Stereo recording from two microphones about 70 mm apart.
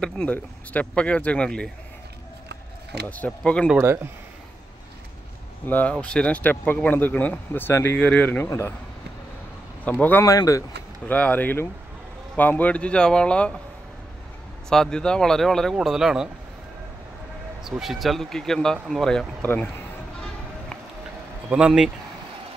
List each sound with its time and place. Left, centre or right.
0.0 s speech: centre
3.1 s speech: centre
3.8 s speech: right
5.7 s speech: left
8.0 s speech: left
8.5 s speech: left
9.8 s speech: left
10.2 s speech: left
11.1 s speech: left
14.7 s speech: centre
15.8 s speech: centre
17.6 s speech: centre
19.4 s speech: left
21.5 s speech: centre